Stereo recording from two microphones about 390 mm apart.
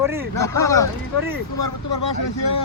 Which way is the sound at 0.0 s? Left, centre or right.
Centre.